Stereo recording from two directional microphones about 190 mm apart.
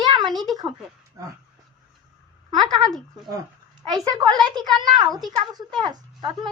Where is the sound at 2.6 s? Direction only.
20° right (ahead or behind).